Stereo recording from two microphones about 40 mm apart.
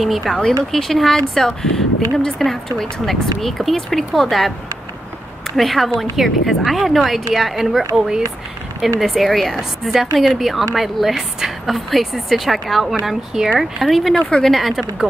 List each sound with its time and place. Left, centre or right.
0.3 s speech: centre
0.7 s a woman's voice: centre
5.6 s a woman's voice: centre
14.3 s speech: centre
14.6 s a woman's voice: centre